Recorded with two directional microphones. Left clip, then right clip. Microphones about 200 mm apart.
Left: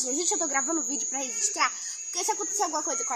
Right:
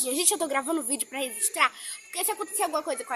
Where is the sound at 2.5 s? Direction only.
25° right (ahead or behind).